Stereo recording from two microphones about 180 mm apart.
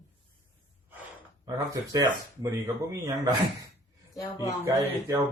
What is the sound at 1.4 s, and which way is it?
Speech, 20° right (ahead or behind).